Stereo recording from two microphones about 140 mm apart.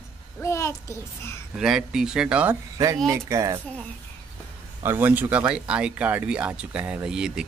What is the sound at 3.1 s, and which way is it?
Speech, 20° right (ahead or behind).